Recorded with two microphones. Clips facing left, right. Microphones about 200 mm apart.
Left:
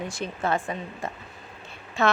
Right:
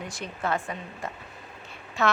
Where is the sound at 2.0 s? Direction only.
25° left (ahead or behind).